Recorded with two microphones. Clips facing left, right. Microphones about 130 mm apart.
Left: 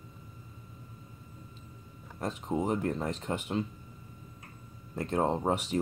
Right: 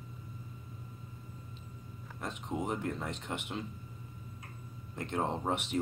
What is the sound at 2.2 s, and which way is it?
Speech, 35° left (ahead or behind).